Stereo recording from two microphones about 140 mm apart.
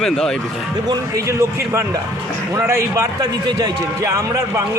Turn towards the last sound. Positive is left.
turn(degrees=-20)  # may be behind; listen again after turning